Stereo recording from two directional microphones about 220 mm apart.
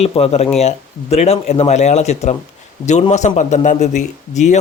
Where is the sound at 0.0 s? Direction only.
25° left (ahead or behind).